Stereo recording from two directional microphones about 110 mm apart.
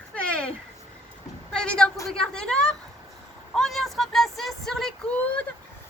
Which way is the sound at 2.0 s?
5° left (ahead or behind).